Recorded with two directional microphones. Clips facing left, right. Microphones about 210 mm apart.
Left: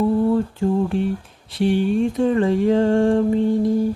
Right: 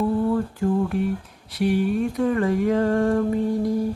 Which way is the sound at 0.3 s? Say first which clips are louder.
Left 3 dB; 25° left (ahead or behind).